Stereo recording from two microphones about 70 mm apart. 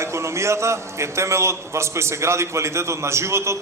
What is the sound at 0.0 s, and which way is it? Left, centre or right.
A man's voice, right.